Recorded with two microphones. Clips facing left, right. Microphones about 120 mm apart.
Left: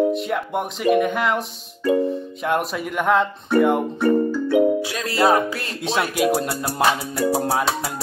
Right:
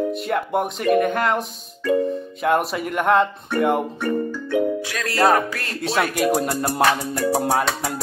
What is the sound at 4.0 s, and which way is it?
Music, 15° left (ahead or behind).